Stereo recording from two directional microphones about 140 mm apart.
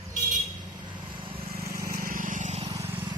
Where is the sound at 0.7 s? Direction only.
35° right (ahead or behind).